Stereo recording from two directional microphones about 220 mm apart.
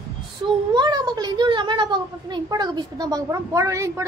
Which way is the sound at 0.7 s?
20° right (ahead or behind).